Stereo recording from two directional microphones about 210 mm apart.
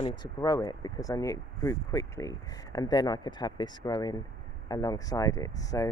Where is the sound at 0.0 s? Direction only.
20° left (ahead or behind).